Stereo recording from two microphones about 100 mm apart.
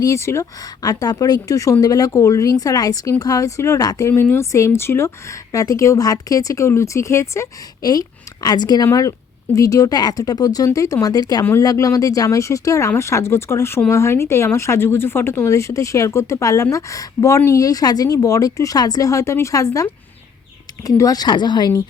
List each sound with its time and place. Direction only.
0.0 s speech: 30° left (ahead or behind)
7.8 s speech: 40° left (ahead or behind)
8.9 s speech: 35° left (ahead or behind)